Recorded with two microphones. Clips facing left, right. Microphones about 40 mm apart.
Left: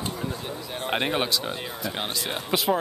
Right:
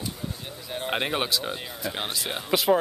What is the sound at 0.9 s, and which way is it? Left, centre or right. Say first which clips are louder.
Speech: left 2 dB; centre.